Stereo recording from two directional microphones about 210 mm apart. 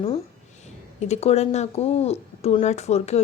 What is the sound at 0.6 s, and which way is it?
Speech, 30° left (ahead or behind).